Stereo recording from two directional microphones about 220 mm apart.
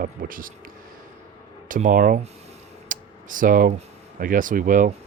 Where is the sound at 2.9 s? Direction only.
35° right (ahead or behind).